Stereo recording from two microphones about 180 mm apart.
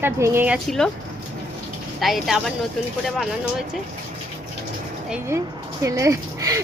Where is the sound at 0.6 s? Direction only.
Centre (ahead or behind).